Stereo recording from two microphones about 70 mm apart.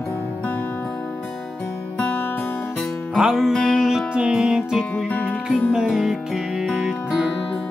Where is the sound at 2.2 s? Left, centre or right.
Left.